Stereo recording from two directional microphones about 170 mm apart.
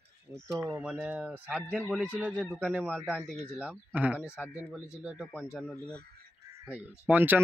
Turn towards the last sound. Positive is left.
turn(degrees=-10)  # may be behind; listen again after turning